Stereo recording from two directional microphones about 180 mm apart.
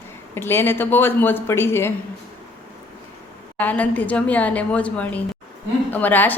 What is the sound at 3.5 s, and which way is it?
A woman's voice, 10° left (ahead or behind).